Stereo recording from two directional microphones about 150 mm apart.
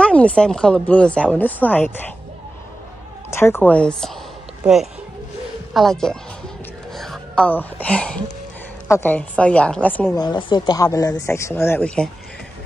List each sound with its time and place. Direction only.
0.0 s a woman's voice: 10° left (ahead or behind)
3.3 s a woman's voice: 15° left (ahead or behind)
4.6 s a woman's voice: 5° right (ahead or behind); by 10.0 s 10° left (ahead or behind)
10.1 s speech: 30° left (ahead or behind); by 12.1 s 10° left (ahead or behind)